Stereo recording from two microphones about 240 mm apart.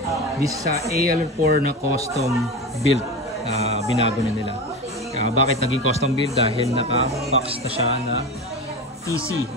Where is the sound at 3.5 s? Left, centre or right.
Right.